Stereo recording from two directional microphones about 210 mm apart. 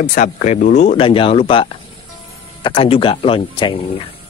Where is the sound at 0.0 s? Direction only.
35° left (ahead or behind).